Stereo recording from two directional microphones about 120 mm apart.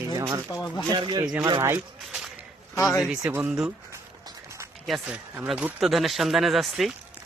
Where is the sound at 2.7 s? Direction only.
25° left (ahead or behind).